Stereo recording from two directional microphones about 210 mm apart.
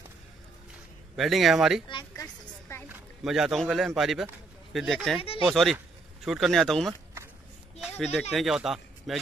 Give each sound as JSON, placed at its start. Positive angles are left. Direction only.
{"t": 1.1, "sound": "speech", "side_deg": 0}
{"t": 1.9, "sound": "a sound", "side_deg": 20}
{"t": 2.9, "sound": "speech", "side_deg": 0}
{"t": 8.0, "sound": "speech", "side_deg": 0}